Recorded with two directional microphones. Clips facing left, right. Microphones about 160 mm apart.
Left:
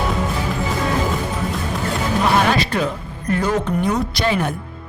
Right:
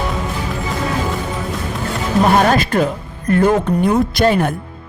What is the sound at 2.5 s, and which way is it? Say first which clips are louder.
Speech: right 4 dB; 45° right (ahead or behind).